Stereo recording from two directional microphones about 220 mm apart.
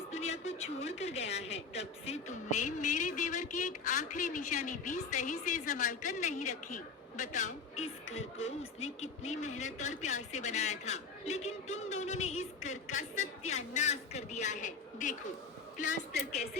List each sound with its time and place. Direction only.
0.1 s a woman's voice: 30° left (ahead or behind)